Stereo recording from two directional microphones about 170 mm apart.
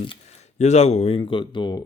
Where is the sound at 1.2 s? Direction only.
30° left (ahead or behind).